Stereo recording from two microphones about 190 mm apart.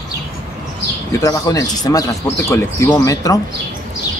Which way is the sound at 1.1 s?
20° left (ahead or behind).